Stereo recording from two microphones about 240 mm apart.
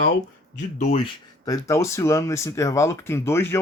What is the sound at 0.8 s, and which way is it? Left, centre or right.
Speech, left.